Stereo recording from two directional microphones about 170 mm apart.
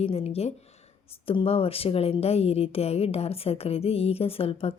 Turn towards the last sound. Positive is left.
turn(degrees=35)  # may be behind; listen again after turning